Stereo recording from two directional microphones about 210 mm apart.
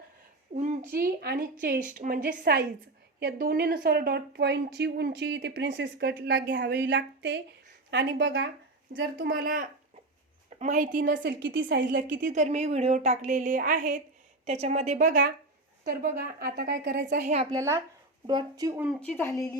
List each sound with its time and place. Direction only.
0.5 s a sound: 35° right (ahead or behind)
0.9 s a woman's voice: 45° right (ahead or behind)
9.0 s a woman's voice: 45° right (ahead or behind)
11.2 s a woman's voice: 60° right (ahead or behind)
11.8 s a woman's voice: 40° right (ahead or behind)
17.5 s speech: 15° right (ahead or behind)
18.9 s speech: 10° left (ahead or behind)